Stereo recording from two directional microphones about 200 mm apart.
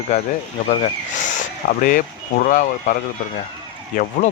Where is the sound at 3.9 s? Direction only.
45° left (ahead or behind).